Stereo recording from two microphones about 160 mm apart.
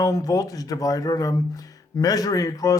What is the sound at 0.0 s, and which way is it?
Speech, 20° left (ahead or behind).